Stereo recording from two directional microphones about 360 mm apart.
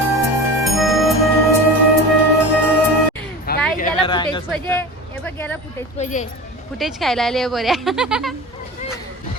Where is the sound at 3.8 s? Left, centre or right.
Centre.